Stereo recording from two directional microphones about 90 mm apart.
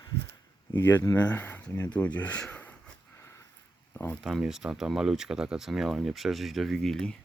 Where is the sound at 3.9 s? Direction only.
20° left (ahead or behind).